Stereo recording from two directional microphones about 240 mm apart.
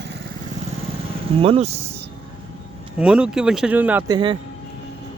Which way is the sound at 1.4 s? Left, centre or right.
Right.